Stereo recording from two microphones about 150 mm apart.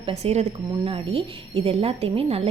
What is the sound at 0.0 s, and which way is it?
A woman's voice, 45° right (ahead or behind).